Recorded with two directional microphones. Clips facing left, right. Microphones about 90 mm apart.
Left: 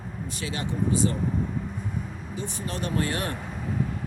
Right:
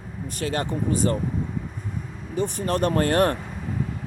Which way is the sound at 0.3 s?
50° right (ahead or behind).